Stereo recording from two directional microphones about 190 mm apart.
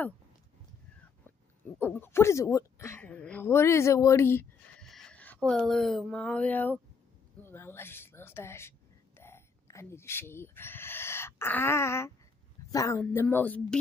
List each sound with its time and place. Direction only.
1.8 s speech: 10° left (ahead or behind)